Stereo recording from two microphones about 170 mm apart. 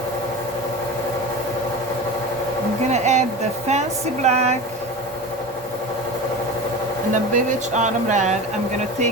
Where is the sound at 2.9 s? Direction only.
45° right (ahead or behind).